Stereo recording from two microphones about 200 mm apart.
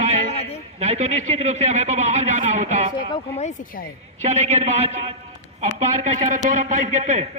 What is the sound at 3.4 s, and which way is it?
Speech, 40° left (ahead or behind).